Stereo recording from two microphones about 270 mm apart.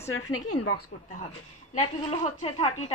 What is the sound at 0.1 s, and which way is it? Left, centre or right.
Speech, left.